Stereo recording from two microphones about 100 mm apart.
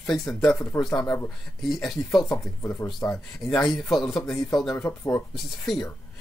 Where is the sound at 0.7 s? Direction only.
30° left (ahead or behind).